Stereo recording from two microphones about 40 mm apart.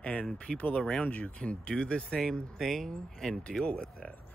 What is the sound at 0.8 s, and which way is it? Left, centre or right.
Speech, left.